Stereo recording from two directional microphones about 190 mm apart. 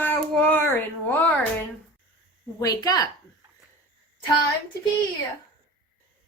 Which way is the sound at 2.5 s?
20° left (ahead or behind).